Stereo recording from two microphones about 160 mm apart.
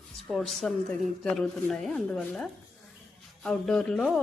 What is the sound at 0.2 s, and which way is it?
Speech, centre (ahead or behind).